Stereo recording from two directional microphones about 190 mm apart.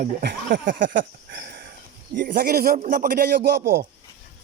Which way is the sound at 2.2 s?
55° right (ahead or behind).